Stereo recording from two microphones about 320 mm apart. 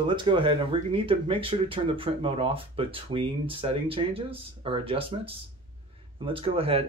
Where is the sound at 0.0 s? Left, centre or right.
Centre.